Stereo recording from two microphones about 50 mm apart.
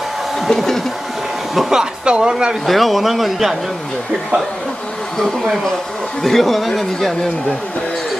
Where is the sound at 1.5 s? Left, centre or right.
Centre.